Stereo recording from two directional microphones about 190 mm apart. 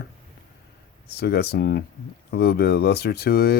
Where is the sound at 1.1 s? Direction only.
55° left (ahead or behind).